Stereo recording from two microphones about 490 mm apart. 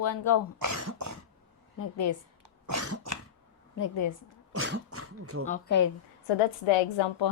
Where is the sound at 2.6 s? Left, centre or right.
Right.